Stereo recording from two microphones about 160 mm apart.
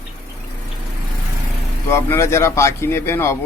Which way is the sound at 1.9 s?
15° left (ahead or behind).